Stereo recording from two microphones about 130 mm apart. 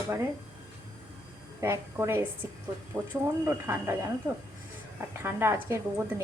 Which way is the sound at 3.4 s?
20° right (ahead or behind).